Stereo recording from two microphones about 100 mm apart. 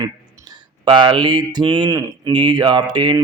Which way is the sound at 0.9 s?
55° right (ahead or behind).